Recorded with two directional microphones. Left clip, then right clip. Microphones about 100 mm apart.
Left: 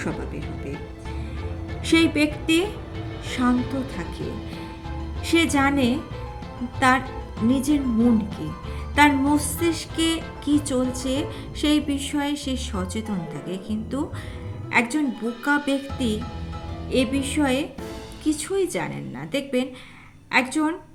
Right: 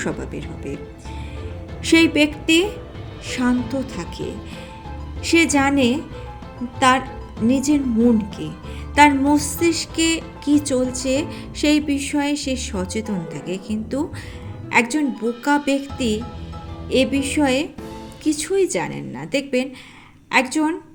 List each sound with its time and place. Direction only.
0.0 s speech: 50° right (ahead or behind)
1.8 s music: 35° right (ahead or behind)
5.2 s music: 30° right (ahead or behind)
6.7 s a woman's voice: 30° right (ahead or behind)
7.4 s music: 30° right (ahead or behind)
9.0 s music: 35° right (ahead or behind)
14.7 s speech: 30° right (ahead or behind)
15.4 s music: 30° right (ahead or behind)